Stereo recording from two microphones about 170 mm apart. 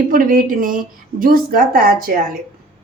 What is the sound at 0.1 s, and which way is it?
A woman's voice, 55° right (ahead or behind).